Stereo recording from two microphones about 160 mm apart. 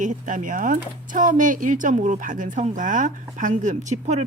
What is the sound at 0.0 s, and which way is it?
Speech, 55° right (ahead or behind).